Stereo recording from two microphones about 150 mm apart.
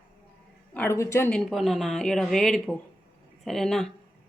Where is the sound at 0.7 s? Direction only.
15° left (ahead or behind).